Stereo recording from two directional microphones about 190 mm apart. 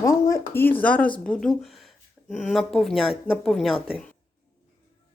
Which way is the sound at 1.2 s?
5° left (ahead or behind).